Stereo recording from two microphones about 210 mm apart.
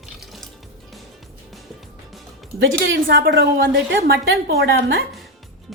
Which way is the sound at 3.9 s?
55° right (ahead or behind).